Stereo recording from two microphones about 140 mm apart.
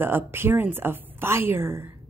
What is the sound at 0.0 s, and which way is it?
A woman's voice, 15° right (ahead or behind).